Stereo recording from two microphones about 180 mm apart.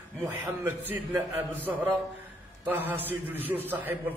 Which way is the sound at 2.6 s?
10° right (ahead or behind).